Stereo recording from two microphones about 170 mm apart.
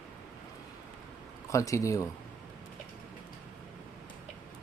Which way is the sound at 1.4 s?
20° left (ahead or behind).